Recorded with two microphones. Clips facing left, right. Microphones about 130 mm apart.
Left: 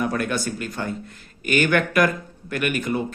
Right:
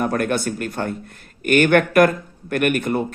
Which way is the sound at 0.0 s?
50° right (ahead or behind).